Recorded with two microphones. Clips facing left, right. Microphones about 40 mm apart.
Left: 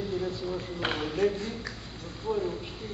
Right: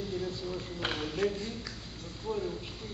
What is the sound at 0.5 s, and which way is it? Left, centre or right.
Speech, centre.